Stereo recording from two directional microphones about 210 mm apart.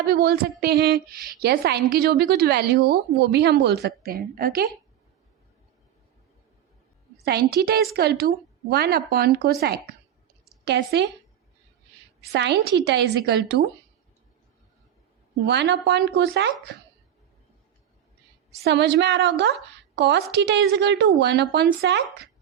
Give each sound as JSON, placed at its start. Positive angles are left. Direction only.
{"t": 0.0, "sound": "a woman's voice", "side_deg": -45}
{"t": 7.3, "sound": "a woman's voice", "side_deg": -50}
{"t": 12.3, "sound": "a woman's voice", "side_deg": -55}
{"t": 15.4, "sound": "a woman's voice", "side_deg": -55}
{"t": 18.6, "sound": "a woman's voice", "side_deg": -55}